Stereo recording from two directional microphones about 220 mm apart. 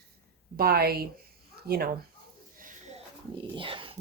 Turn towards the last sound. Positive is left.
turn(degrees=-25)  # may be behind; listen again after turning